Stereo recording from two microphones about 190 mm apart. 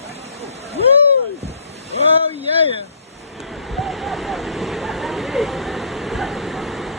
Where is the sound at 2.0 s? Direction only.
30° right (ahead or behind).